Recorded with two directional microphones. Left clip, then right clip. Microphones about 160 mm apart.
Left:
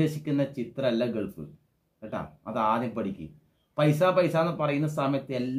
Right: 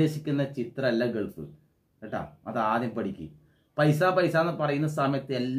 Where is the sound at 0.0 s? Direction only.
25° left (ahead or behind).